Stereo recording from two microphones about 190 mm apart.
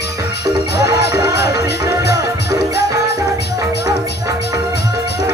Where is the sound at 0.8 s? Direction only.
60° left (ahead or behind).